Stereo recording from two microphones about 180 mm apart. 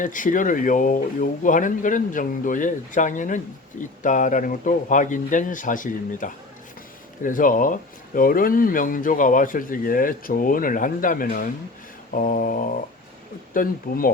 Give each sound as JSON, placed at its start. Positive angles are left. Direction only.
{"t": 0.0, "sound": "speech", "side_deg": 45}